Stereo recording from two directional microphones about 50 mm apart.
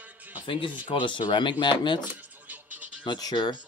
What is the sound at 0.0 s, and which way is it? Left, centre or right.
Music, right.